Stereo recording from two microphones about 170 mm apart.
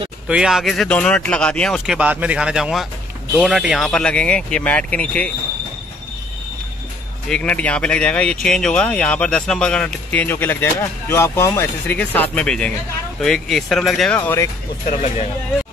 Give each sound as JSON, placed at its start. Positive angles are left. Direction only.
{"t": 0.3, "sound": "speech", "side_deg": -5}
{"t": 2.0, "sound": "speech", "side_deg": -10}
{"t": 7.2, "sound": "speech", "side_deg": 5}
{"t": 14.9, "sound": "speech", "side_deg": 40}